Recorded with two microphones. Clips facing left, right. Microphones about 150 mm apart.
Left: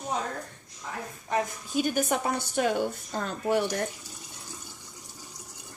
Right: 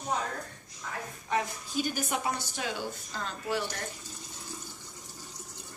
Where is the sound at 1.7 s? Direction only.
55° left (ahead or behind).